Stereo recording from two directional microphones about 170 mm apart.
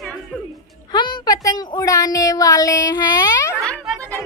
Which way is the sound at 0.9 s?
25° left (ahead or behind).